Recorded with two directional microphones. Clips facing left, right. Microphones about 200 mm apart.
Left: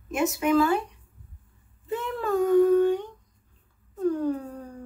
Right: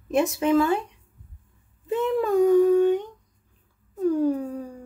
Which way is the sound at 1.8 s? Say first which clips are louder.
Right 6 dB; 20° right (ahead or behind).